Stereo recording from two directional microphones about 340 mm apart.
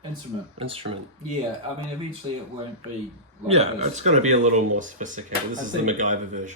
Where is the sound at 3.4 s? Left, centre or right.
Centre.